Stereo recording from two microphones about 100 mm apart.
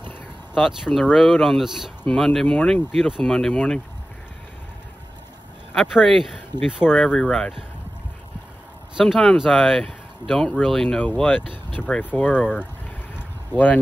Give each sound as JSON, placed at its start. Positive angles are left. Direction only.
{"t": 0.6, "sound": "speech", "side_deg": -5}
{"t": 2.9, "sound": "speech", "side_deg": 0}
{"t": 5.8, "sound": "speech", "side_deg": 0}
{"t": 8.9, "sound": "speech", "side_deg": 0}